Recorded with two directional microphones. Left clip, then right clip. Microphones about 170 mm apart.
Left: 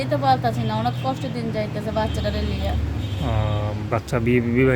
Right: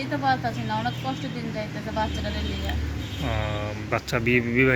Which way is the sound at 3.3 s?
5° left (ahead or behind).